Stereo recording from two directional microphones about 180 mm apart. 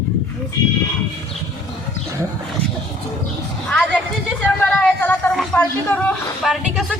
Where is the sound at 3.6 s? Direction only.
5° left (ahead or behind).